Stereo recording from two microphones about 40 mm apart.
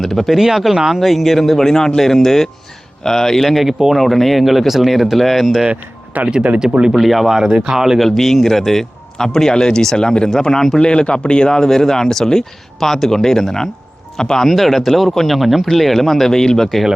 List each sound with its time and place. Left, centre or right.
0.0 s speech: centre
3.7 s speech: centre
3.9 s speech: centre
6.3 s speech: right
6.9 s speech: centre
7.3 s speech: centre
7.9 s speech: centre
10.8 s speech: left
14.5 s speech: centre